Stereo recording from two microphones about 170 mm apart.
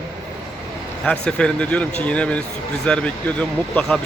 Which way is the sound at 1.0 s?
5° left (ahead or behind).